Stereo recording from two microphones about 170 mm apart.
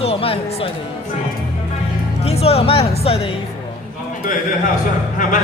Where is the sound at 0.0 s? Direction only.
35° left (ahead or behind).